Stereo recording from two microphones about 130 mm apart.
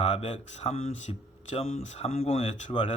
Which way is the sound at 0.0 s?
60° left (ahead or behind).